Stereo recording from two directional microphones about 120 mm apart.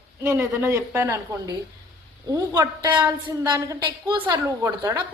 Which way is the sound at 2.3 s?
30° right (ahead or behind).